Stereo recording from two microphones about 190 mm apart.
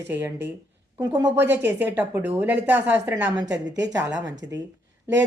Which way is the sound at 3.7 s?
70° right (ahead or behind).